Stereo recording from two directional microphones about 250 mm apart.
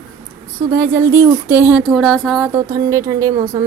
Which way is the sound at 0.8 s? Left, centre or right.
Centre.